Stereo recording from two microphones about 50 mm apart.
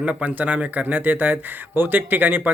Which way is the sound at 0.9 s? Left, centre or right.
Right.